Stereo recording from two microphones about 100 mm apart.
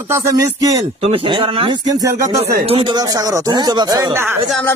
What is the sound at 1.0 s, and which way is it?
Speech, 60° right (ahead or behind).